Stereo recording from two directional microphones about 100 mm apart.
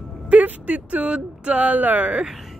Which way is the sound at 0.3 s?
15° right (ahead or behind).